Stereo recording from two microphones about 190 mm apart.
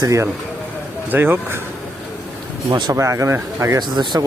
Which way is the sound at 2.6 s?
20° right (ahead or behind).